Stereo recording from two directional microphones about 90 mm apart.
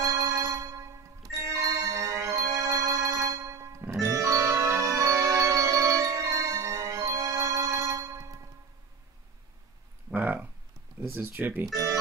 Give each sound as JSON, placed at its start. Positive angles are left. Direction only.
{"t": 0.0, "sound": "music", "side_deg": -35}
{"t": 10.1, "sound": "a sound", "side_deg": -20}
{"t": 11.0, "sound": "speech", "side_deg": -20}
{"t": 11.6, "sound": "speech", "side_deg": -40}